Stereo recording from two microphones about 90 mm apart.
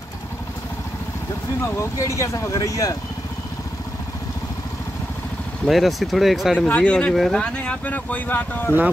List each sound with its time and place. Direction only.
1.8 s speech: 35° left (ahead or behind)
5.7 s speech: centre (ahead or behind)
6.7 s speech: 15° left (ahead or behind)